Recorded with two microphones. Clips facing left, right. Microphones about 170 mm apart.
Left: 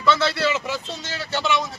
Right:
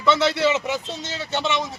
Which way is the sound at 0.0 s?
20° right (ahead or behind).